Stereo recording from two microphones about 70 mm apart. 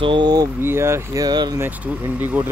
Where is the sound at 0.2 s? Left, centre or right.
Right.